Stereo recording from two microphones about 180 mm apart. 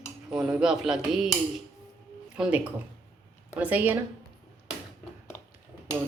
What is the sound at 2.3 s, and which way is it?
Speech, 5° right (ahead or behind).